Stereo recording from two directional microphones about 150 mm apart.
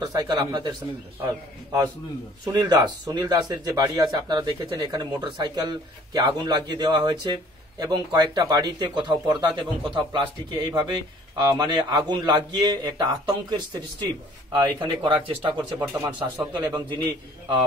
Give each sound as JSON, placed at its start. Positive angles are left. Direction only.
{"t": 0.0, "sound": "speech", "side_deg": -25}
{"t": 2.4, "sound": "speech", "side_deg": -25}
{"t": 15.9, "sound": "speech", "side_deg": -15}